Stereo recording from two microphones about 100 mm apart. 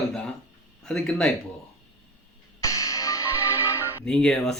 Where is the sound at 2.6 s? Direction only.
30° left (ahead or behind).